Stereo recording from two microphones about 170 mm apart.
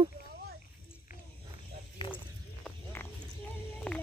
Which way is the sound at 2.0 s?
30° left (ahead or behind).